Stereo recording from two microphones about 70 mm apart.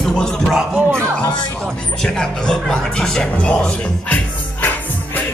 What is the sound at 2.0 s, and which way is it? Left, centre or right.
Speech, centre.